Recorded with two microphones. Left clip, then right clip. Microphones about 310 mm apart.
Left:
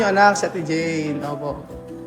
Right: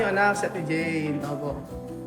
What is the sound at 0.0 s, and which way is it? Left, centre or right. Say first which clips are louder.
A woman's voice: left 7 dB; centre.